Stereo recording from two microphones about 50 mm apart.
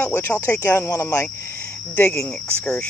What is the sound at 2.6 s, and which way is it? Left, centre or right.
Speech, left.